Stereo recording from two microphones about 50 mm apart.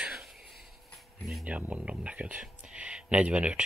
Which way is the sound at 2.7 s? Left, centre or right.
Right.